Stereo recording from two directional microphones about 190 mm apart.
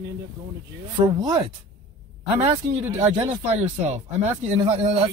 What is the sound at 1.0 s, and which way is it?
Speech, 25° right (ahead or behind).